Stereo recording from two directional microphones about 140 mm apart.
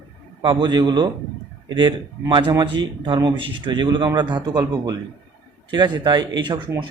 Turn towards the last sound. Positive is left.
turn(degrees=-30)  # may be behind; listen again after turning